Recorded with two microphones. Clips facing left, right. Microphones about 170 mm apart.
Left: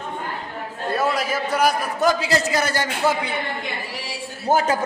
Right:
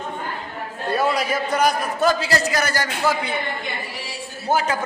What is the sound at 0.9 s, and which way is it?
A man's voice, centre (ahead or behind).